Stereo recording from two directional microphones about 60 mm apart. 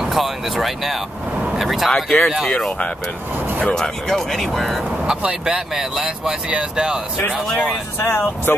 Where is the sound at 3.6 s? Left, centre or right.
Centre.